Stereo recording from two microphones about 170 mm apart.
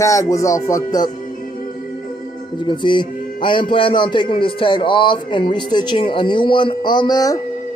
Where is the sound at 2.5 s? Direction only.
25° left (ahead or behind).